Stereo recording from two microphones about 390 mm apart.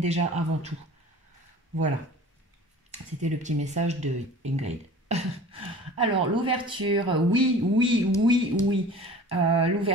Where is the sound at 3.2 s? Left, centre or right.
Centre.